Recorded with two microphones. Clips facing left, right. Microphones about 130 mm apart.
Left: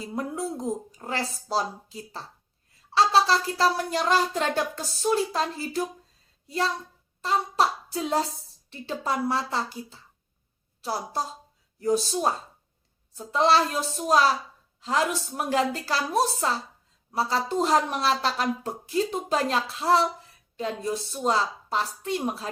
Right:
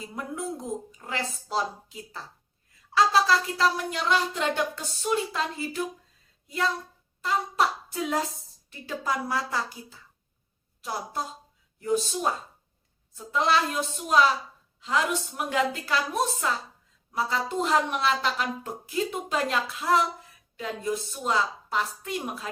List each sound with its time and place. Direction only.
0.0 s a woman's voice: 30° left (ahead or behind)
7.2 s hands: 30° left (ahead or behind)
8.7 s a woman's voice: 30° left (ahead or behind)